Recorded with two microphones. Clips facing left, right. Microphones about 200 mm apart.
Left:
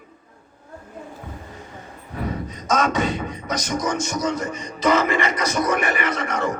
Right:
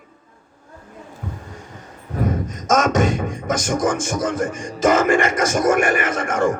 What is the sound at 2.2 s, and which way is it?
A man's voice, 45° right (ahead or behind).